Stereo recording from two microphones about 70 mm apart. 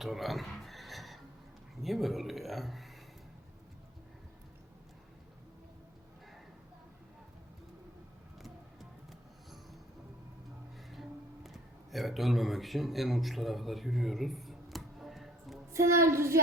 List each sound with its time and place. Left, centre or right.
0.0 s a sound: centre
1.8 s speech: centre
8.4 s vehicle: centre
11.4 s speech: centre
15.7 s a woman's voice: right